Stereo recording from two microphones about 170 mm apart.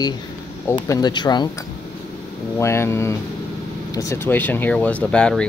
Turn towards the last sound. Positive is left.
turn(degrees=5)  # may be behind; listen again after turning